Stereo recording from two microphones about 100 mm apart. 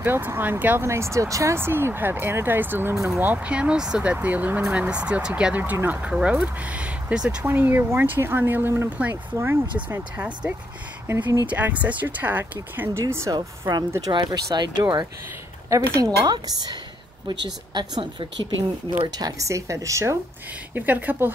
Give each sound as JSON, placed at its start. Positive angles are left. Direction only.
{"t": 0.0, "sound": "speech", "side_deg": -20}
{"t": 13.3, "sound": "a woman's voice", "side_deg": -40}
{"t": 15.7, "sound": "a woman's voice", "side_deg": -35}
{"t": 17.7, "sound": "speech", "side_deg": -45}
{"t": 19.1, "sound": "a woman's voice", "side_deg": -35}
{"t": 20.7, "sound": "speech", "side_deg": -15}